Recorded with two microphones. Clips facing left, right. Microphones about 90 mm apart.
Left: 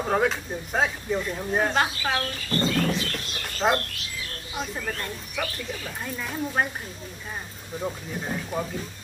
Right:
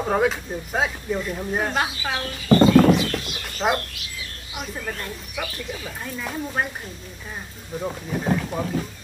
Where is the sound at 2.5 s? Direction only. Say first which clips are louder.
Right 12 dB; 85° right.